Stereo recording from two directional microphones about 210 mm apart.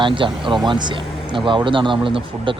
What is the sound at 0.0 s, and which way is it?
Speech, 20° right (ahead or behind).